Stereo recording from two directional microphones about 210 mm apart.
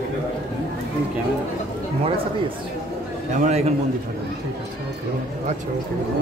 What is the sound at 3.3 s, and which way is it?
Speech, 35° right (ahead or behind).